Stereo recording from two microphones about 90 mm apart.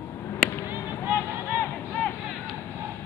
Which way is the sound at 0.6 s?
25° right (ahead or behind).